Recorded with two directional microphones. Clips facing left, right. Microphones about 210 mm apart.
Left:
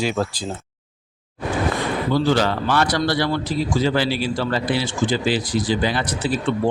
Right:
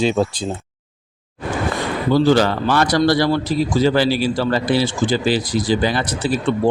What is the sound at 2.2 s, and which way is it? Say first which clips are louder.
A man's voice: right 4 dB; 40° right (ahead or behind).